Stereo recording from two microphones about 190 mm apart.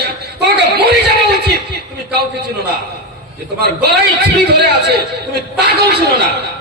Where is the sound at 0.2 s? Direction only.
60° right (ahead or behind).